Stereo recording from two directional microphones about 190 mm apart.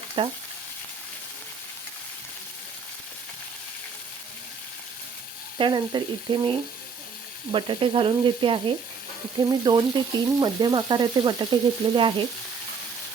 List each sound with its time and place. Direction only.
0.2 s frying: 25° right (ahead or behind)
5.5 s frying: 25° right (ahead or behind)